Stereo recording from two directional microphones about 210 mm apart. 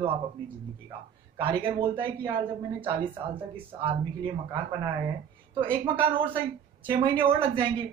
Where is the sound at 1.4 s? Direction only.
25° right (ahead or behind).